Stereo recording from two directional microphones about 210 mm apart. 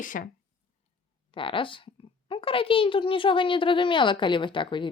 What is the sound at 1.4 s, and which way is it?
Speech, 25° left (ahead or behind).